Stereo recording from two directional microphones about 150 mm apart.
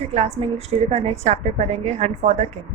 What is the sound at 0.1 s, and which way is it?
A woman's voice, 45° right (ahead or behind).